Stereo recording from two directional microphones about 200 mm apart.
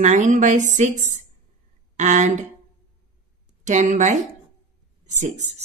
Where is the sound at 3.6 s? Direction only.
35° right (ahead or behind).